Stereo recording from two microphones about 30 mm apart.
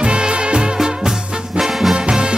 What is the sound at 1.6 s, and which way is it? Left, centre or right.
Music, centre.